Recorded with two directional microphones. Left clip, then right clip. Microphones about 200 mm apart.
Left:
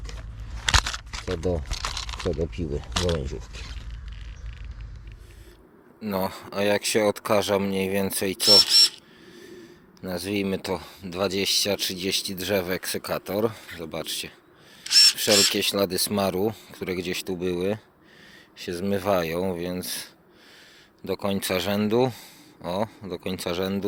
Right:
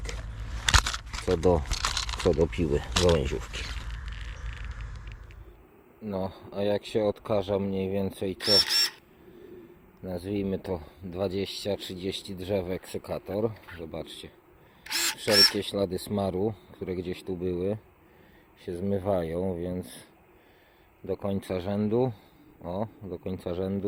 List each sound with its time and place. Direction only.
0.1 s a sound: centre (ahead or behind)
1.5 s crumpling: centre (ahead or behind)
2.7 s a sound: centre (ahead or behind)
6.0 s speech: 5° right (ahead or behind)
8.6 s camera: 20° right (ahead or behind)
10.0 s speech: 5° right (ahead or behind)
15.5 s speech: 5° right (ahead or behind)